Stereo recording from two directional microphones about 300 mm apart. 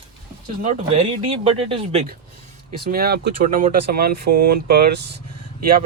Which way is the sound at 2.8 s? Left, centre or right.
Right.